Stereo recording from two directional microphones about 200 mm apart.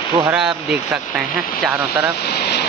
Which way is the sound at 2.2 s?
55° left (ahead or behind).